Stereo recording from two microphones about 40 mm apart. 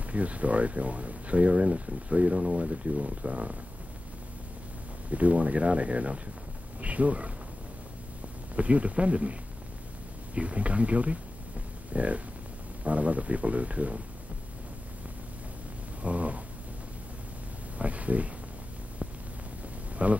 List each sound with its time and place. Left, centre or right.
0.1 s speech: right
5.1 s speech: right
8.5 s speech: right
16.0 s a sound: right
17.7 s a sound: right
20.0 s speech: right